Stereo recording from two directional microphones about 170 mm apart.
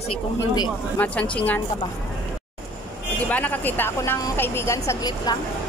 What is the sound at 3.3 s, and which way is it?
A woman's voice, 10° left (ahead or behind).